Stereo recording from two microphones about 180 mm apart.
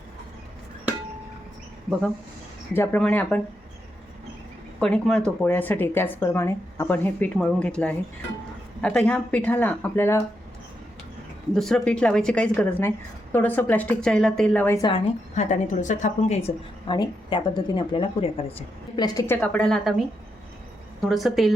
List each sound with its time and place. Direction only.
2.7 s speech: 10° left (ahead or behind)
4.8 s speech: 5° left (ahead or behind)
11.5 s a woman's voice: centre (ahead or behind)
15.4 s a woman's voice: 45° left (ahead or behind)
16.8 s speech: 25° left (ahead or behind); by 20.0 s 5° left (ahead or behind)
21.1 s a woman's voice: centre (ahead or behind)